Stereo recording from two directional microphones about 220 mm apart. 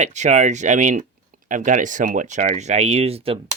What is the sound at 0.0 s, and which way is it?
Speech, 30° right (ahead or behind).